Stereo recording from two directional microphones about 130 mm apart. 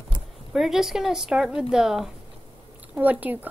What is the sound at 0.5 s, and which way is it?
A woman's voice, centre (ahead or behind).